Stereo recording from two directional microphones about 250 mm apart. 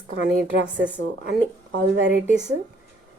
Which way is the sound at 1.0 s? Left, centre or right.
Right.